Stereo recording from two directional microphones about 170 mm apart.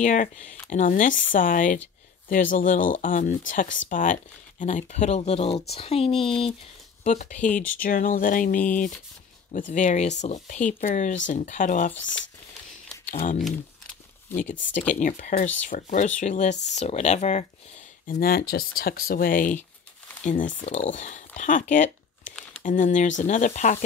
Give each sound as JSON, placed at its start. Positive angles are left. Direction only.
{"t": 0.0, "sound": "speech", "side_deg": 50}
{"t": 3.6, "sound": "speech", "side_deg": 90}
{"t": 3.9, "sound": "speech", "side_deg": 50}
{"t": 7.1, "sound": "speech", "side_deg": 45}
{"t": 11.9, "sound": "speech", "side_deg": 90}
{"t": 13.4, "sound": "crumpling", "side_deg": 0}
{"t": 14.5, "sound": "speech", "side_deg": 45}
{"t": 18.0, "sound": "speech", "side_deg": 60}